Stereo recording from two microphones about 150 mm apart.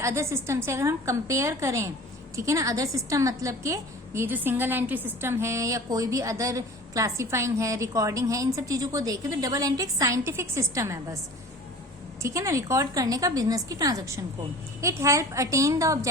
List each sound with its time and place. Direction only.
0.0 s a woman's voice: 20° right (ahead or behind)
12.2 s a woman's voice: 20° right (ahead or behind)